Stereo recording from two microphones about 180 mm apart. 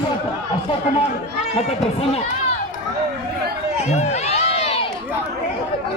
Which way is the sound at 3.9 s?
35° left (ahead or behind).